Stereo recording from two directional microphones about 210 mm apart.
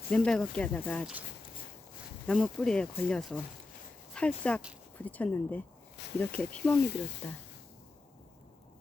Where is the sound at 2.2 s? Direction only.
5° left (ahead or behind).